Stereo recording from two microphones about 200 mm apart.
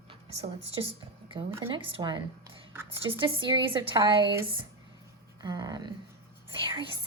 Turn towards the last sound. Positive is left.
turn(degrees=-25)  # may be behind; listen again after turning